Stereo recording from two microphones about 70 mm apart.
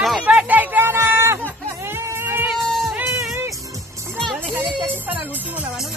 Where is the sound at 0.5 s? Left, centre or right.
Right.